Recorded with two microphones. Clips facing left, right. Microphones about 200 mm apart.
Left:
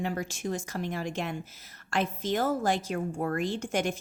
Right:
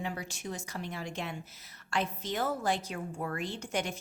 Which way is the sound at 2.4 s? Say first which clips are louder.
Left 3 dB; 45° left (ahead or behind).